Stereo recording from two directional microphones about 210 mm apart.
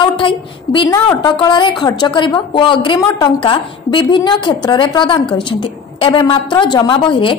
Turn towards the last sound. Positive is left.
turn(degrees=25)  # may be behind; listen again after turning